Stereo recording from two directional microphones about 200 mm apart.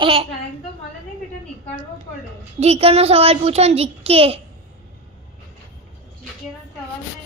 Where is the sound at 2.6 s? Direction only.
30° right (ahead or behind).